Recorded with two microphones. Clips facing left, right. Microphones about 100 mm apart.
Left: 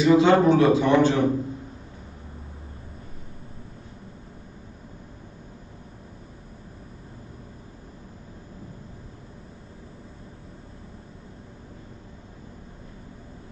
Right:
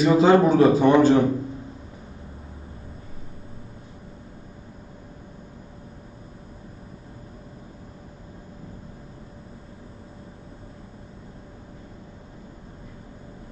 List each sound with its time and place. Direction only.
0.0 s a man's voice: 40° right (ahead or behind)